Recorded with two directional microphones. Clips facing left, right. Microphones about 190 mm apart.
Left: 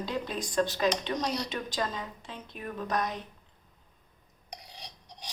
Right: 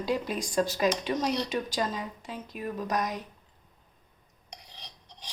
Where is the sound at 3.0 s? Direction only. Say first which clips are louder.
Left 1 dB; 40° right (ahead or behind).